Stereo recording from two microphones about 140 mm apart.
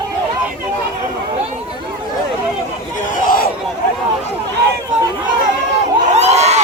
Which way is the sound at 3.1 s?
90° left.